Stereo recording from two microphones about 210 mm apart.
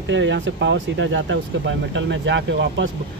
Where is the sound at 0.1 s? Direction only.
60° right (ahead or behind).